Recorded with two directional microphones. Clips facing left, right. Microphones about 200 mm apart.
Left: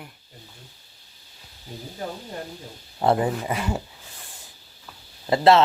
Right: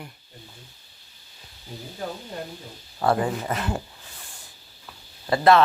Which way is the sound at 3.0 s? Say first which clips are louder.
Left 2 dB; 20° left (ahead or behind).